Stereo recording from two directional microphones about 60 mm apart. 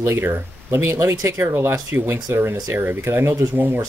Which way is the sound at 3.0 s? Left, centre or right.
Right.